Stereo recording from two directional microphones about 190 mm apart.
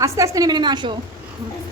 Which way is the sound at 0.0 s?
15° right (ahead or behind).